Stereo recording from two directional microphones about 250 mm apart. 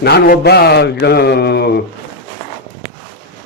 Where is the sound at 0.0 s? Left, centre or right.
Left.